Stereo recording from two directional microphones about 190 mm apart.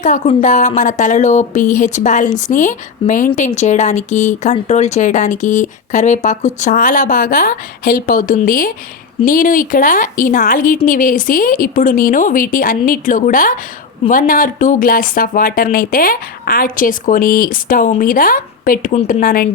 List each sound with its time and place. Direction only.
0.0 s speech: 40° left (ahead or behind)
19.2 s speech: 50° left (ahead or behind)